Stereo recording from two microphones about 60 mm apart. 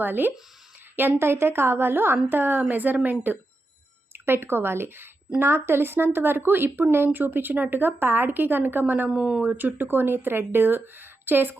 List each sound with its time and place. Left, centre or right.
0.0 s speech: right
9.0 s speech: centre
9.4 s speech: right